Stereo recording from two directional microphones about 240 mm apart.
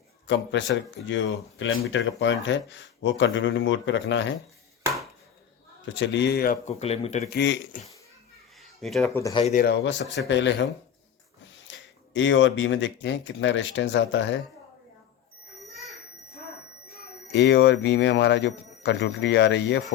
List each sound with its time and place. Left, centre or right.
0.3 s speech: left
5.8 s speech: left
7.3 s speech: left
8.8 s speech: centre
9.0 s speech: centre
9.4 s speech: left
9.8 s speech: left
11.7 s speech: left
17.3 s speech: left